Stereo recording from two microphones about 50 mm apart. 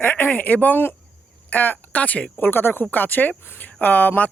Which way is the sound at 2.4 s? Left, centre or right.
Left.